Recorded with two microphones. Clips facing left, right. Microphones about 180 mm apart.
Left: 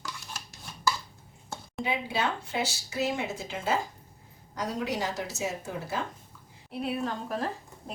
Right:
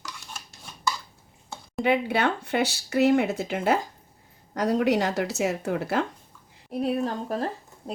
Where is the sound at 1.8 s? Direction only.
65° right (ahead or behind).